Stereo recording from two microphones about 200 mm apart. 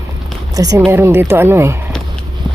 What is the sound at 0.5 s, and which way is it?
Speech, 15° right (ahead or behind).